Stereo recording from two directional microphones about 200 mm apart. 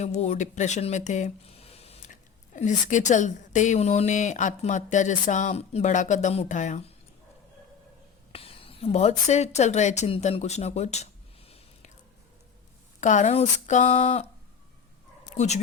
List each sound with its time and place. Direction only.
0.0 s a woman's voice: 35° left (ahead or behind)
8.3 s a woman's voice: 30° left (ahead or behind)
13.0 s a woman's voice: 35° left (ahead or behind)
15.4 s a woman's voice: 35° left (ahead or behind)